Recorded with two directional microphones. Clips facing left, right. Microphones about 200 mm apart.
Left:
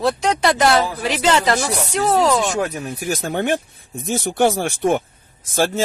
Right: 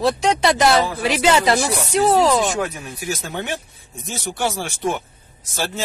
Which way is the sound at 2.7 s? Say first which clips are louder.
Left 4 dB; 45° left (ahead or behind).